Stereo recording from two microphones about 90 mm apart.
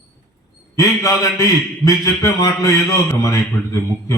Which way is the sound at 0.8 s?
40° left (ahead or behind).